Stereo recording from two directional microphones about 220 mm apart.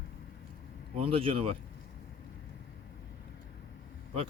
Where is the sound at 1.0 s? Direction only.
25° right (ahead or behind).